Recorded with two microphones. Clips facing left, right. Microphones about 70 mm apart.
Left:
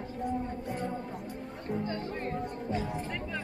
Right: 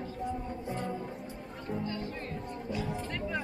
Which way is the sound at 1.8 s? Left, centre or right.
Left.